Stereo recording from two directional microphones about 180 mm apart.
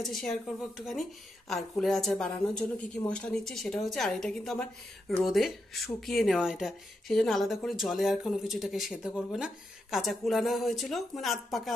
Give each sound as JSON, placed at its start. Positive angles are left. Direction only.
{"t": 0.0, "sound": "speech", "side_deg": 0}